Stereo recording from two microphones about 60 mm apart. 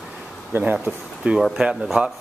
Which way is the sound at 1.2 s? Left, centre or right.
Right.